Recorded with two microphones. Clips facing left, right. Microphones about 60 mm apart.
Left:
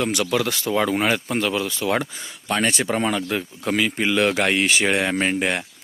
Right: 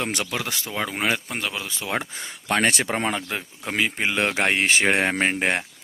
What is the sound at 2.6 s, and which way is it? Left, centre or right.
Speech, right.